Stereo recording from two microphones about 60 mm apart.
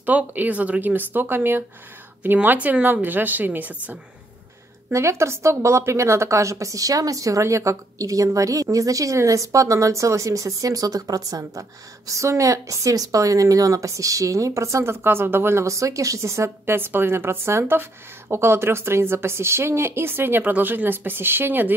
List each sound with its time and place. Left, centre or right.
0.0 s speech: right
4.9 s a woman's voice: right
12.1 s a woman's voice: right
15.6 s a woman's voice: right
16.4 s a woman's voice: right